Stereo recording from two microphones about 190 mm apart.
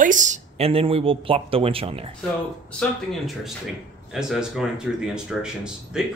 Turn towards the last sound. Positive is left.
turn(degrees=-5)  # may be behind; listen again after turning